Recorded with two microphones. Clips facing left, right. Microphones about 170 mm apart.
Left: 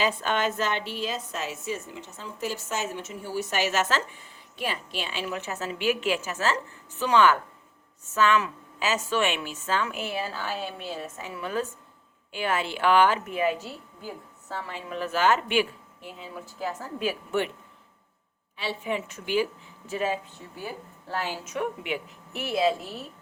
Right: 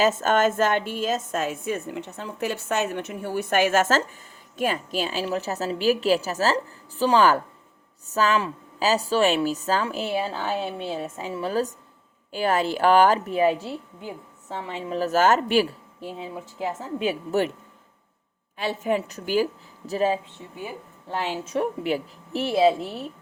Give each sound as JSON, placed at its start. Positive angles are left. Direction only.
{"t": 0.0, "sound": "a woman's voice", "side_deg": -45}
{"t": 14.9, "sound": "a woman's voice", "side_deg": -40}
{"t": 16.6, "sound": "a woman's voice", "side_deg": -20}
{"t": 18.5, "sound": "a woman's voice", "side_deg": -45}
{"t": 20.6, "sound": "a woman's voice", "side_deg": -20}